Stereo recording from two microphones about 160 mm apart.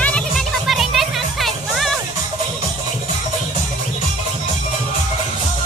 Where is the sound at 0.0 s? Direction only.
5° left (ahead or behind).